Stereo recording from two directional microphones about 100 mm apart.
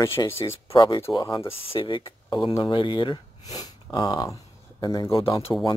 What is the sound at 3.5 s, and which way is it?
Speech, 40° left (ahead or behind).